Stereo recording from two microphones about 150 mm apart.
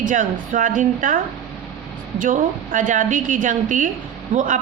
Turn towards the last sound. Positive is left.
turn(degrees=-60)  # may be behind; listen again after turning